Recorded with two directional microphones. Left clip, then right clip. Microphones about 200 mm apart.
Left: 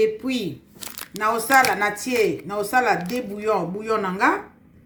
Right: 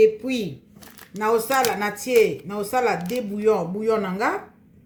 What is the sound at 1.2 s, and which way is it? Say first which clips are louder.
Speech: left 3 dB; 20° left (ahead or behind).